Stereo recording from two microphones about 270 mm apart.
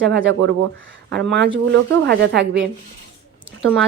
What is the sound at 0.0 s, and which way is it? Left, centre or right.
Speech, right.